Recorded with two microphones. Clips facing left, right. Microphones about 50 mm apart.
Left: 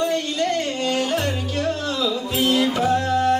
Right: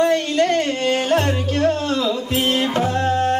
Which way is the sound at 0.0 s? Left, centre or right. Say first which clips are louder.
Right 5 dB; right.